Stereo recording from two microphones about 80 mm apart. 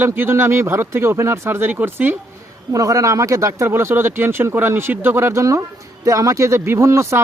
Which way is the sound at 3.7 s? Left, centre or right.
Right.